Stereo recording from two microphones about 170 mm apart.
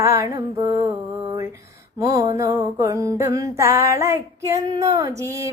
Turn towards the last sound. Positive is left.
turn(degrees=-20)  # may be behind; listen again after turning